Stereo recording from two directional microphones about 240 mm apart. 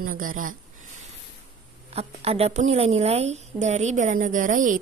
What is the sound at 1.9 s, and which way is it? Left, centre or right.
A woman's voice, right.